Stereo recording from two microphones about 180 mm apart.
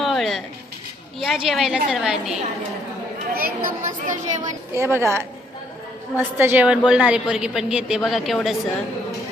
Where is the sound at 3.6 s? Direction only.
45° right (ahead or behind).